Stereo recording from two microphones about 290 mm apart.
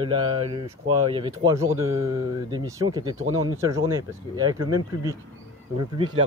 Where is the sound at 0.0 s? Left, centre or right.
Centre.